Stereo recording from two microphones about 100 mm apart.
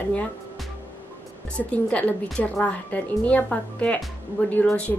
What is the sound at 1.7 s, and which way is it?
Speech, 15° left (ahead or behind).